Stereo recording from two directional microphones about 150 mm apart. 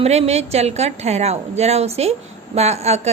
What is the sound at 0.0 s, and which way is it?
A woman's voice, 45° right (ahead or behind).